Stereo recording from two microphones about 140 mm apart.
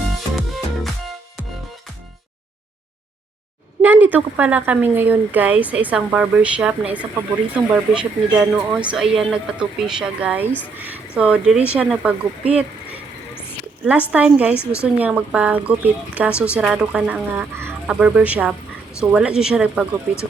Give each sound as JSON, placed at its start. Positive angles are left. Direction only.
{"t": 0.3, "sound": "music", "side_deg": 0}
{"t": 3.8, "sound": "speech", "side_deg": -15}
{"t": 14.1, "sound": "speech", "side_deg": -10}
{"t": 14.5, "sound": "a woman's voice", "side_deg": 20}
{"t": 14.9, "sound": "speech", "side_deg": -10}